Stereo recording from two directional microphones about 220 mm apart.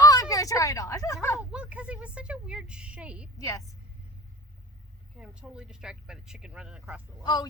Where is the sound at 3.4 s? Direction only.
15° left (ahead or behind).